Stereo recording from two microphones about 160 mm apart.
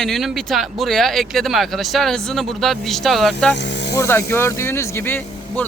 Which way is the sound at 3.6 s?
90° left.